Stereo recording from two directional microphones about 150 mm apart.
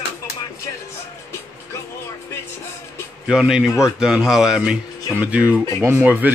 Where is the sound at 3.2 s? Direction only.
5° right (ahead or behind).